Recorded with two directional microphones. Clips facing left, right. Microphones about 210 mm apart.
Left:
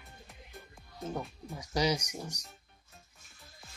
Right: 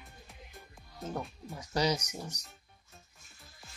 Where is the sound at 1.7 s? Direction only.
10° left (ahead or behind).